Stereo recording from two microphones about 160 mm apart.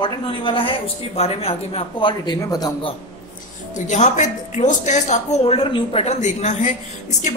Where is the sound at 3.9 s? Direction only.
50° left (ahead or behind).